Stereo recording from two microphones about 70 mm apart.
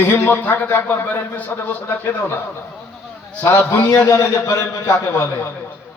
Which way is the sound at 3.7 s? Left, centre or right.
Left.